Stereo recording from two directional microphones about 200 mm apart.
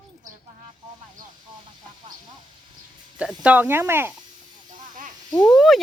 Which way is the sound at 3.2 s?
5° right (ahead or behind).